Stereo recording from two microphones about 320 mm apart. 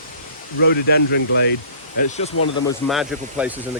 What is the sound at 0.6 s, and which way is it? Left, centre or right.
Speech, left.